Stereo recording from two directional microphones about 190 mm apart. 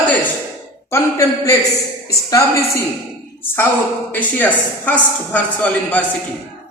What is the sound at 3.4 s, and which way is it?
Speech, 10° left (ahead or behind).